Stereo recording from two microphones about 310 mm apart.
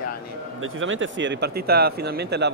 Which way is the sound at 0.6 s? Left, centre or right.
Right.